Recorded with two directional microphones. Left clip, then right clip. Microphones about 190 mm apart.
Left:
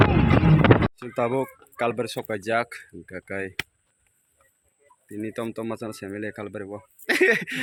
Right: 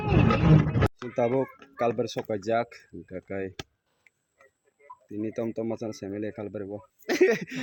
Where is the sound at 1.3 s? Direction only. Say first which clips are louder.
Left 1 dB; 20° left (ahead or behind).